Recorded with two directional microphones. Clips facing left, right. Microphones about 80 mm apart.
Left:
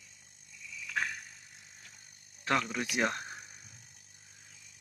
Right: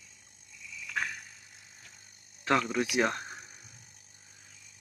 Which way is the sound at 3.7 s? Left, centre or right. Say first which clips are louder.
Right 1 dB; right.